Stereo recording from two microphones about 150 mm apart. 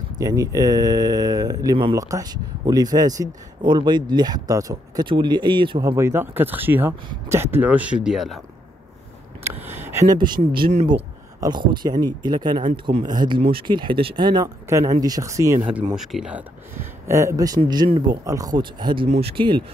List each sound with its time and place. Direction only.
0.2 s speech: 25° right (ahead or behind); by 8.4 s 5° right (ahead or behind)
9.4 s a sound: 15° right (ahead or behind)
10.1 s speech: 30° right (ahead or behind)
16.0 s speech: 5° right (ahead or behind); by 18.2 s 35° right (ahead or behind)
18.2 s speech: 25° right (ahead or behind)
19.0 s speech: 40° right (ahead or behind)